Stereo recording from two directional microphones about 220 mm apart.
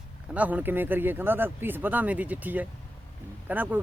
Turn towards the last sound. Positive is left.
turn(degrees=-10)  # may be behind; listen again after turning